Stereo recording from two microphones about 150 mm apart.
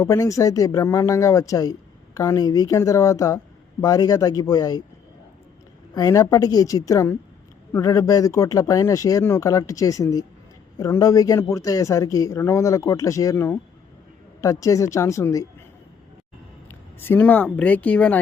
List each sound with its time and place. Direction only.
0.0 s speech: 20° left (ahead or behind)
5.9 s speech: 25° left (ahead or behind)
17.0 s speech: 15° left (ahead or behind)